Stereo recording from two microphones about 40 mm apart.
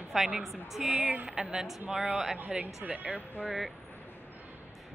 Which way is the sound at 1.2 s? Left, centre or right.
Centre.